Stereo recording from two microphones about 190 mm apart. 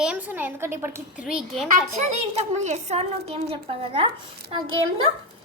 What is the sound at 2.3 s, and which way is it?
A woman's voice, 35° right (ahead or behind).